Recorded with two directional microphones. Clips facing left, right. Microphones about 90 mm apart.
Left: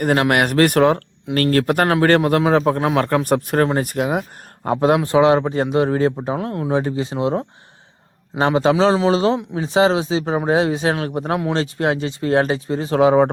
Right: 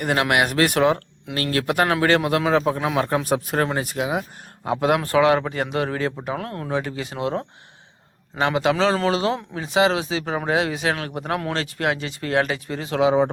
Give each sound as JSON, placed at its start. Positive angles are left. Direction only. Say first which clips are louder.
{"t": 0.0, "sound": "speech", "louder": "left 4 dB", "side_deg": 40}
{"t": 4.9, "sound": "speech", "louder": "left 2 dB", "side_deg": 20}
{"t": 13.0, "sound": "speech", "louder": "left 4 dB", "side_deg": 45}